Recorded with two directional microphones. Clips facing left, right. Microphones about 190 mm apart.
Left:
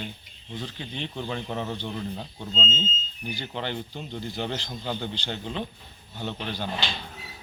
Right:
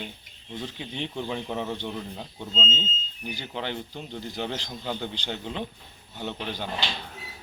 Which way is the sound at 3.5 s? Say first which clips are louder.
Even; 5° right (ahead or behind).